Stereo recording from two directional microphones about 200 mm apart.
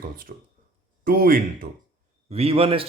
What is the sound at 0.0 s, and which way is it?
Speech, 45° right (ahead or behind).